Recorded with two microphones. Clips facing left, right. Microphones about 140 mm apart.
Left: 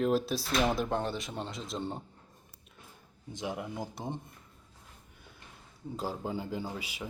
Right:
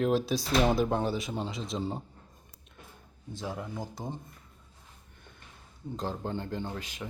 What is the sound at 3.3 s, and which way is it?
Speech, 15° left (ahead or behind).